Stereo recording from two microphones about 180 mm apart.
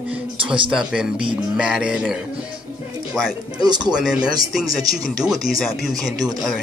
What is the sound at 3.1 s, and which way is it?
Speech, 5° right (ahead or behind).